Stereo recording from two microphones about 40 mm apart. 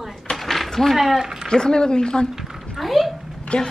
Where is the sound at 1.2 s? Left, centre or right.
Centre.